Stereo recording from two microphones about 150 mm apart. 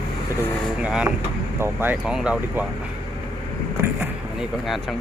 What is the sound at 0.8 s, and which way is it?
Speech, 5° right (ahead or behind).